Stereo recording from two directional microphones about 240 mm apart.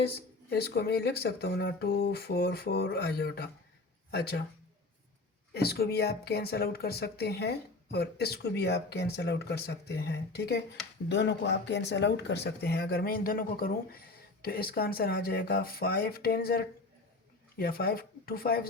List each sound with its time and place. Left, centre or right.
0.5 s speech: left
5.5 s speech: left